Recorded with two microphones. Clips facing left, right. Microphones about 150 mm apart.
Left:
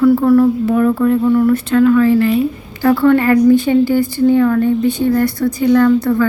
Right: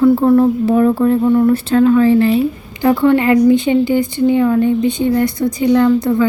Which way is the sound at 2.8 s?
20° right (ahead or behind).